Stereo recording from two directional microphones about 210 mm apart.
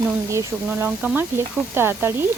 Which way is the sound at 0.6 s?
10° right (ahead or behind).